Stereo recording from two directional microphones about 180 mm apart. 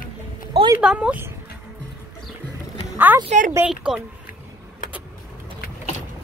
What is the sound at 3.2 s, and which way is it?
Speech, 45° right (ahead or behind).